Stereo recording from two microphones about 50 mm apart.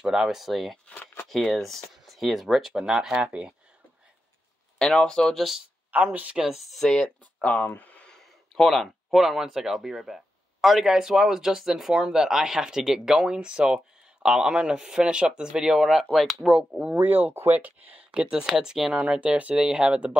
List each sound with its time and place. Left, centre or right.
0.0 s speech: centre
3.2 s speech: right
4.7 s speech: centre
5.3 s speech: centre
6.9 s speech: centre
7.4 s speech: left
8.2 s speech: centre
14.5 s speech: centre
16.9 s speech: right
18.1 s speech: centre
18.9 s speech: right